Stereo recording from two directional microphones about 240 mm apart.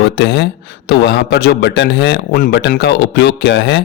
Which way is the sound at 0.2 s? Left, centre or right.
Left.